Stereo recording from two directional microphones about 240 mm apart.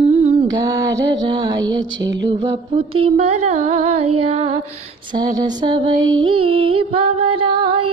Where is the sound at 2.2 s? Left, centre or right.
Centre.